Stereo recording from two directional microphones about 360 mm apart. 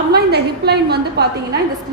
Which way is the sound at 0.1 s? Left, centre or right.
Right.